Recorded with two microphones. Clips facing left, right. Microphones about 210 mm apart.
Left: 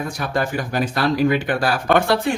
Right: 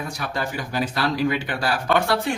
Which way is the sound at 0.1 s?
50° left (ahead or behind).